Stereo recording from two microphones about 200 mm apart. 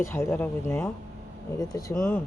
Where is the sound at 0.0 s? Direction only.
10° left (ahead or behind).